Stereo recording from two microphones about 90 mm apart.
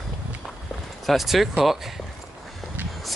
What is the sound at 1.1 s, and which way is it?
Speech, centre (ahead or behind).